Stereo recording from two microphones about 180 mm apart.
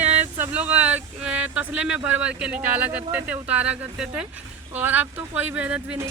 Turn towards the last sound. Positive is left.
turn(degrees=-10)  # may be behind; listen again after turning